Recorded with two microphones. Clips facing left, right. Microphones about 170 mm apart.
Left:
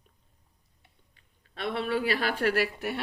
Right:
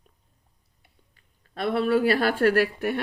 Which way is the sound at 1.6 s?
40° right (ahead or behind).